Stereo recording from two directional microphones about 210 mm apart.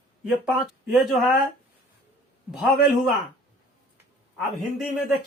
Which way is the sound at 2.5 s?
Centre (ahead or behind).